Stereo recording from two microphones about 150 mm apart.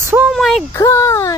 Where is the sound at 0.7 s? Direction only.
20° left (ahead or behind).